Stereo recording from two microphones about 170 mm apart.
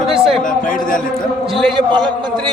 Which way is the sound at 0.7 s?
50° left (ahead or behind).